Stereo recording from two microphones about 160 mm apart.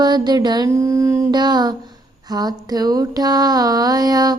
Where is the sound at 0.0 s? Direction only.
25° right (ahead or behind).